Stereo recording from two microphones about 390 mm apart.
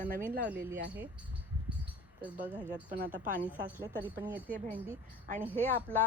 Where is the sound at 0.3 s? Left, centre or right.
Right.